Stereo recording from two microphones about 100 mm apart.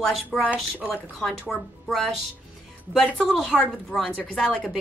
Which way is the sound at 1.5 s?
Centre (ahead or behind).